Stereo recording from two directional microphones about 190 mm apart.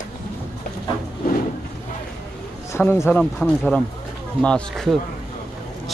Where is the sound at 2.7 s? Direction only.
15° left (ahead or behind).